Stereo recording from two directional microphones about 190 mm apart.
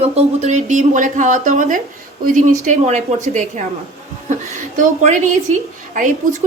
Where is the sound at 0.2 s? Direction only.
40° right (ahead or behind).